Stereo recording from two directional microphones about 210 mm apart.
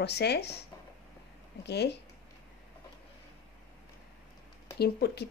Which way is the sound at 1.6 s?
50° left (ahead or behind).